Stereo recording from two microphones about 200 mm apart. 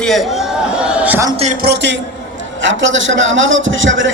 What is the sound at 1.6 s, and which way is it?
Speech, 60° right (ahead or behind).